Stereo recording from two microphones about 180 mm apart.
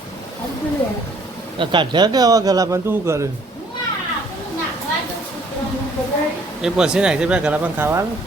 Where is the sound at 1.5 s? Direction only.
25° right (ahead or behind).